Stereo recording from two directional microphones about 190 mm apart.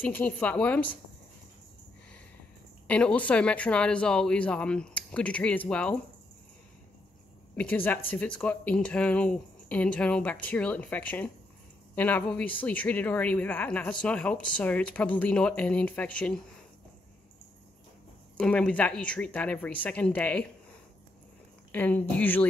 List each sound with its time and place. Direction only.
0.0 s speech: 10° left (ahead or behind)
2.9 s speech: 5° left (ahead or behind)
7.5 s speech: 10° left (ahead or behind)
18.4 s speech: 5° left (ahead or behind)
21.7 s speech: 10° left (ahead or behind)